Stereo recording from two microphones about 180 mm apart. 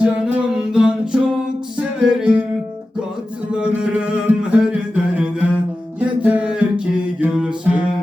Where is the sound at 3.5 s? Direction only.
5° right (ahead or behind).